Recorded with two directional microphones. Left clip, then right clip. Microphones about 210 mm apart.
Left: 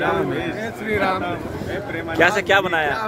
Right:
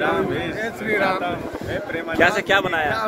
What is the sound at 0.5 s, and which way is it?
Speech, 10° right (ahead or behind).